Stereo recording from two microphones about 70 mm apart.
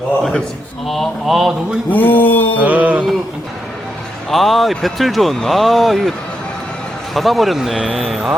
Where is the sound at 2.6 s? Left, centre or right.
Right.